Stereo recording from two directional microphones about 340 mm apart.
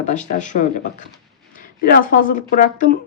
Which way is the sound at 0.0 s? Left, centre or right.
Left.